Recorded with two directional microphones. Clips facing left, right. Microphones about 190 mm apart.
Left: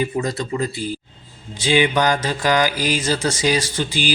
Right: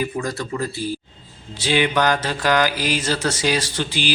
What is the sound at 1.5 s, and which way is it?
Mantra, 15° left (ahead or behind).